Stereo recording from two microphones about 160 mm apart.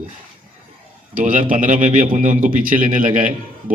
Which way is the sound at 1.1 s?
55° right (ahead or behind).